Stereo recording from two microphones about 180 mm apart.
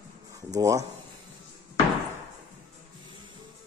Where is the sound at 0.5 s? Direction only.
15° right (ahead or behind).